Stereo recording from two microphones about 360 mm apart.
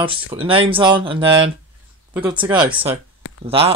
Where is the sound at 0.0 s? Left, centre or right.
Centre.